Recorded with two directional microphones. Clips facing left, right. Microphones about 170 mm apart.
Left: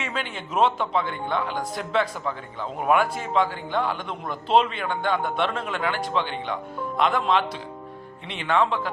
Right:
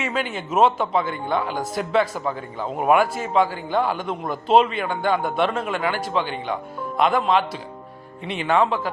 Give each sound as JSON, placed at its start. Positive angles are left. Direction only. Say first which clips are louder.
{"t": 0.0, "sound": "a man's voice", "louder": "right 5 dB", "side_deg": -5}
{"t": 2.2, "sound": "a man's voice", "louder": "right 4 dB", "side_deg": -40}
{"t": 2.7, "sound": "a man's voice", "louder": "right 3 dB", "side_deg": -5}
{"t": 4.0, "sound": "a man's voice", "louder": "right 5 dB", "side_deg": -45}
{"t": 4.6, "sound": "a man's voice", "louder": "right 4 dB", "side_deg": -5}
{"t": 8.3, "sound": "a man's voice", "louder": "right 3 dB", "side_deg": -10}